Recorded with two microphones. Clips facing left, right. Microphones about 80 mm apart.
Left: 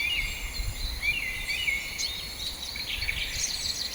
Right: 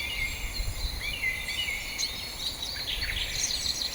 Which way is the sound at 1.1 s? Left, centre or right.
Right.